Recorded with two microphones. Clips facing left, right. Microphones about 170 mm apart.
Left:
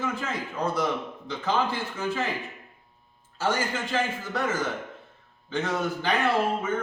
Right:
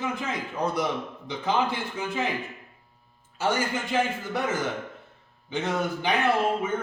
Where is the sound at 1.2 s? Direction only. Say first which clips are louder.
Right 1 dB; 15° right (ahead or behind).